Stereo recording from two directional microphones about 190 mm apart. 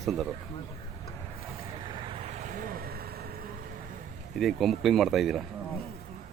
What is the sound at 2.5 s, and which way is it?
Vehicle, 50° right (ahead or behind).